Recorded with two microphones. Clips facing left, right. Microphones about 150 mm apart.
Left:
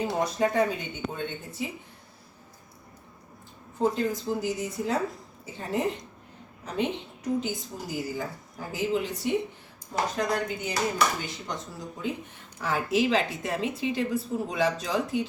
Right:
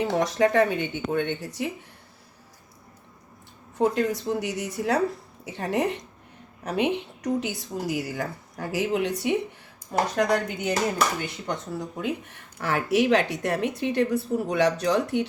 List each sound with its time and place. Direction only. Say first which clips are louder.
0.1 s a woman's voice: right 4 dB; 85° right
3.8 s speech: right 3 dB; 75° right (ahead or behind)